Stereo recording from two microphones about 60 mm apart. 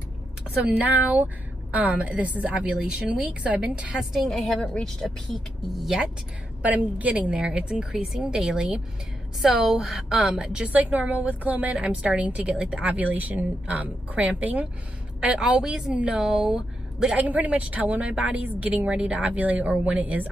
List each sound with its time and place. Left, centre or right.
0.6 s a woman's voice: right
3.9 s speech: centre
6.6 s a woman's voice: right
7.9 s a woman's voice: centre
12.9 s a woman's voice: right; by 17.2 s centre
17.2 s a woman's voice: right
18.9 s a woman's voice: centre